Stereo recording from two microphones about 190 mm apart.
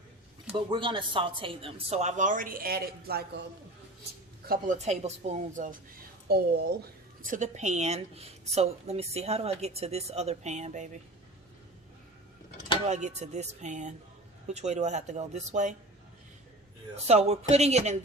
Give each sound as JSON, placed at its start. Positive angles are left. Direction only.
{"t": 0.5, "sound": "speech", "side_deg": -25}
{"t": 4.4, "sound": "speech", "side_deg": -45}
{"t": 6.2, "sound": "speech", "side_deg": -55}
{"t": 7.3, "sound": "speech", "side_deg": -40}
{"t": 12.9, "sound": "speech", "side_deg": -40}
{"t": 17.1, "sound": "speech", "side_deg": -35}